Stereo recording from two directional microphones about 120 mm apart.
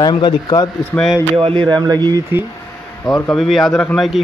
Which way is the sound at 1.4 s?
45° right (ahead or behind).